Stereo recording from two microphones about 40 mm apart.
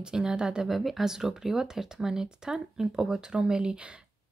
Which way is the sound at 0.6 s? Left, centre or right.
Centre.